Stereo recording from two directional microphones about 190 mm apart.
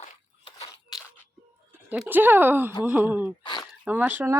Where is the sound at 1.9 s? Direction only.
5° right (ahead or behind).